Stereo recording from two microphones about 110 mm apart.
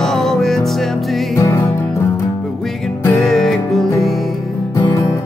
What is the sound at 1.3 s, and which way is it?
Music, 30° left (ahead or behind).